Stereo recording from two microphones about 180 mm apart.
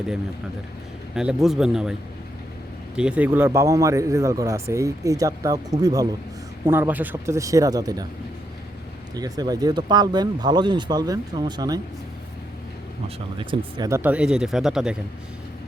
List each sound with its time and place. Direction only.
1.1 s speech: 5° right (ahead or behind); by 8.0 s 20° right (ahead or behind)
9.1 s speech: 20° right (ahead or behind)
13.4 s speech: 25° right (ahead or behind); by 14.9 s 5° right (ahead or behind)